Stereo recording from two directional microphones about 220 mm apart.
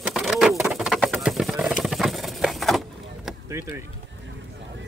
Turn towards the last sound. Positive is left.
turn(degrees=-10)  # may be behind; listen again after turning